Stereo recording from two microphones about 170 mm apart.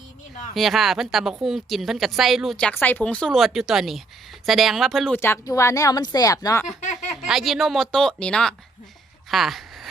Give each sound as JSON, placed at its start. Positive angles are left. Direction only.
{"t": 0.5, "sound": "speech", "side_deg": 0}
{"t": 5.1, "sound": "speech", "side_deg": 15}
{"t": 7.3, "sound": "speech", "side_deg": 0}
{"t": 9.3, "sound": "a sound", "side_deg": 0}